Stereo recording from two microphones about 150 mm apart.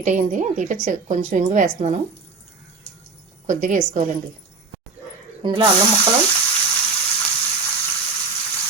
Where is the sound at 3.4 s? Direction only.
55° right (ahead or behind).